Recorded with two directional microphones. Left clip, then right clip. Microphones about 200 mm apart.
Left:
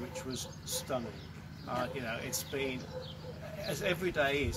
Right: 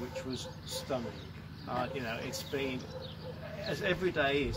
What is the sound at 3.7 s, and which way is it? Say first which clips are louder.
Speech: right 1 dB; 15° left (ahead or behind).